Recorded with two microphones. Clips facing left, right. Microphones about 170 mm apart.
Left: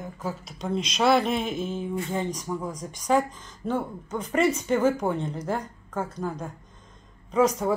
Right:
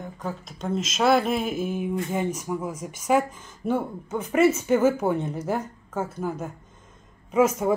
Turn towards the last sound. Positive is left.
turn(degrees=-20)  # may be behind; listen again after turning